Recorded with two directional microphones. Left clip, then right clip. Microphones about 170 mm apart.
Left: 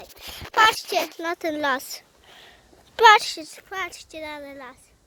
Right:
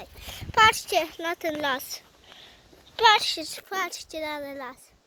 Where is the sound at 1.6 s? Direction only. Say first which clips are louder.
Left 6 dB; 45° left (ahead or behind).